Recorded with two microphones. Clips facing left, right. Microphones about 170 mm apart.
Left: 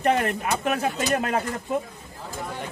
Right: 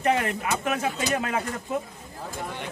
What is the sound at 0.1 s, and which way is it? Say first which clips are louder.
Speech: left 2 dB; 50° left (ahead or behind).